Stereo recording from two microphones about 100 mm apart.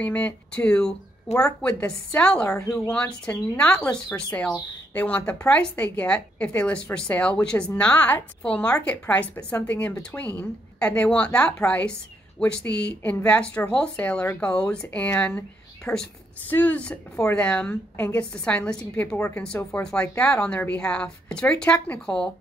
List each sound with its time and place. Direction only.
0.0 s a woman's voice: 15° left (ahead or behind)
2.6 s speech: 35° left (ahead or behind)
2.9 s a woman's voice: 15° left (ahead or behind)
15.9 s a woman's voice: 25° left (ahead or behind)
18.4 s a woman's voice: 10° left (ahead or behind)